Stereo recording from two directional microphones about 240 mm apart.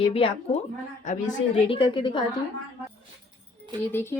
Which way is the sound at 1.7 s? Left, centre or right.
Centre.